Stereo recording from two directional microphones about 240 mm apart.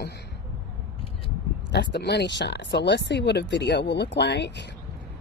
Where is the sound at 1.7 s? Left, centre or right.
Left.